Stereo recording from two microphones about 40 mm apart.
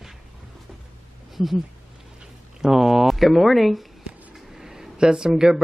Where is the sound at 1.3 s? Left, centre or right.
Centre.